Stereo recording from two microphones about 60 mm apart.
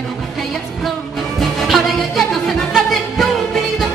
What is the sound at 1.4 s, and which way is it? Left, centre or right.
Music, centre.